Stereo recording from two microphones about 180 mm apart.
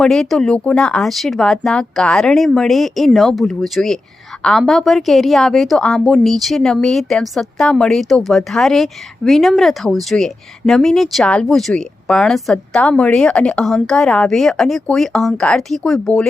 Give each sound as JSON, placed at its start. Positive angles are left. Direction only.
{"t": 0.0, "sound": "a woman's voice", "side_deg": 0}